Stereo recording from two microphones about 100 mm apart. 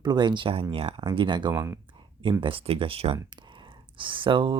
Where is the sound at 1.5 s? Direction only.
25° right (ahead or behind).